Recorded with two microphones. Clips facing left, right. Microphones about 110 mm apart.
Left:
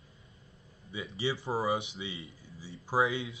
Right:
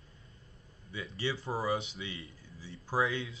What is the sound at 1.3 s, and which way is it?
Speech, 25° left (ahead or behind).